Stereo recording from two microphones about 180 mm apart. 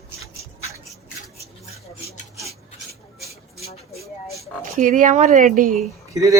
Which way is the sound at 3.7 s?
35° left (ahead or behind).